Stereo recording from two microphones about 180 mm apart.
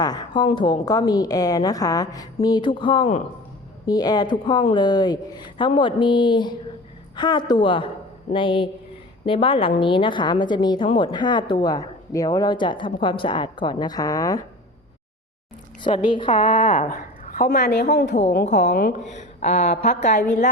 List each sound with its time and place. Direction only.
0.0 s a woman's voice: 25° left (ahead or behind)
16.1 s a woman's voice: 30° left (ahead or behind)
16.6 s a woman's voice: 40° left (ahead or behind); by 18.2 s 65° left (ahead or behind)
18.4 s speech: 40° left (ahead or behind)
18.7 s speech: 55° left (ahead or behind)
19.1 s speech: 40° left (ahead or behind)